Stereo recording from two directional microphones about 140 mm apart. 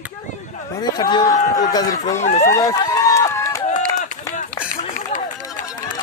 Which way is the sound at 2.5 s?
25° left (ahead or behind).